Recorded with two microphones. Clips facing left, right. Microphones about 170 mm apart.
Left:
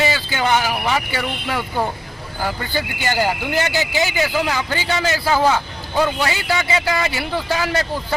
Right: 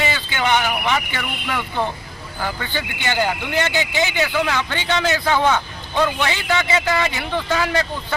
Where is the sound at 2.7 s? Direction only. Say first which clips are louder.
Left 2 dB; 40° left (ahead or behind).